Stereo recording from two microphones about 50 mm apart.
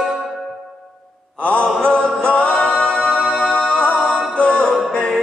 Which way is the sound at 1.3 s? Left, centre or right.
Left.